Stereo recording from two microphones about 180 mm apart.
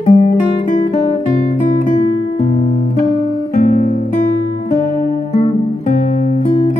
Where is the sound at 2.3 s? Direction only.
40° left (ahead or behind).